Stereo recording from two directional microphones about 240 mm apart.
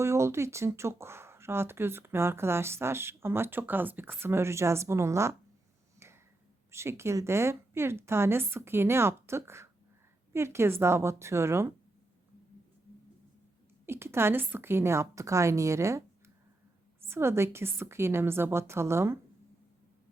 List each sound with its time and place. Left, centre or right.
0.0 s speech: centre
6.0 s a sound: centre
6.7 s speech: centre
13.8 s speech: centre